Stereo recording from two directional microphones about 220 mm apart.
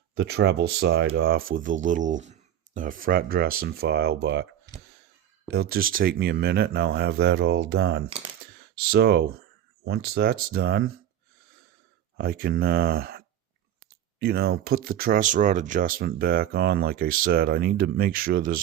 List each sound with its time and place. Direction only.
0.1 s speech: 45° right (ahead or behind)
5.5 s speech: 45° right (ahead or behind)
12.1 s speech: 40° right (ahead or behind)